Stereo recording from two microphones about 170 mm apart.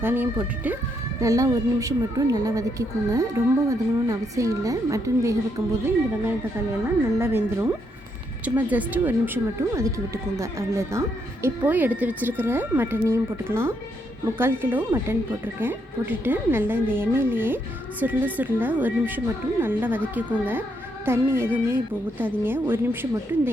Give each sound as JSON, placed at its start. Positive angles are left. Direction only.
{"t": 0.0, "sound": "a woman's voice", "side_deg": -15}
{"t": 7.2, "sound": "a woman's voice", "side_deg": -15}